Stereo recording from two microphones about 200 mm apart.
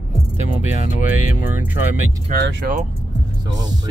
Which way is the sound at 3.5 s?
20° right (ahead or behind).